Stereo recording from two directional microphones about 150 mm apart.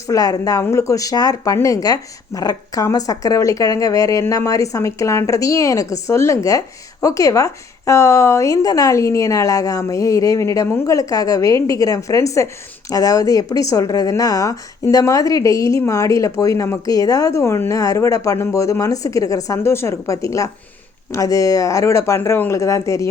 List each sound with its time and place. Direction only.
0.1 s speech: 25° left (ahead or behind)